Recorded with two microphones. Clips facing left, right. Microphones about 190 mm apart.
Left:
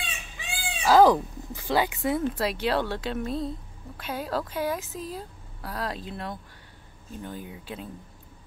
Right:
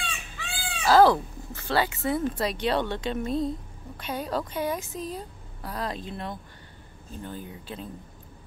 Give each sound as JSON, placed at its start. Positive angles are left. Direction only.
{"t": 0.0, "sound": "chicken", "side_deg": 20}
{"t": 2.3, "sound": "a woman's voice", "side_deg": 5}